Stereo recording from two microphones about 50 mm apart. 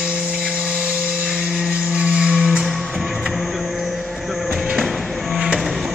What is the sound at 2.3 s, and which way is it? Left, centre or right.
Music, centre.